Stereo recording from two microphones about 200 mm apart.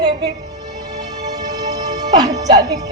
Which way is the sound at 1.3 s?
20° right (ahead or behind).